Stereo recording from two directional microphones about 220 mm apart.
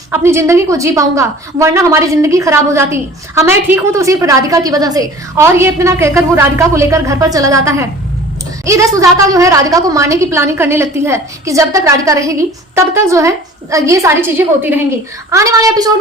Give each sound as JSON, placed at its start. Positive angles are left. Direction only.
{"t": 0.1, "sound": "a woman's voice", "side_deg": -10}